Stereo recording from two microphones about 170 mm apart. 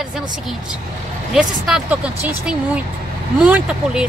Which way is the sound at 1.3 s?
5° right (ahead or behind).